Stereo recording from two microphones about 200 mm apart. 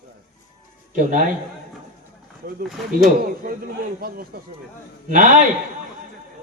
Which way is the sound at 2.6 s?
Centre (ahead or behind).